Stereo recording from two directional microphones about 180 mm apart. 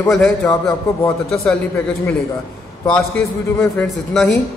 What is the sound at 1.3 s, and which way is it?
Speech, 5° left (ahead or behind).